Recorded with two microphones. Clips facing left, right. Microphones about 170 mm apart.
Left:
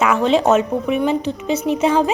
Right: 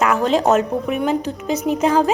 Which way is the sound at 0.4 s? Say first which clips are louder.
Left 1 dB; centre (ahead or behind).